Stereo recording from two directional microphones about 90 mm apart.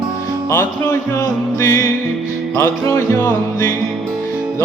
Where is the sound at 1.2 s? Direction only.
40° left (ahead or behind).